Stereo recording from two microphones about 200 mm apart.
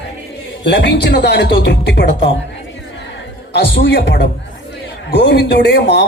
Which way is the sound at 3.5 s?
65° left (ahead or behind).